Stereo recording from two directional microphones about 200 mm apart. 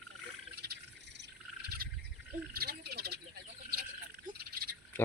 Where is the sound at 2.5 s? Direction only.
50° right (ahead or behind).